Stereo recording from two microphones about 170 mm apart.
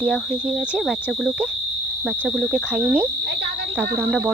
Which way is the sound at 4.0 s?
Centre (ahead or behind).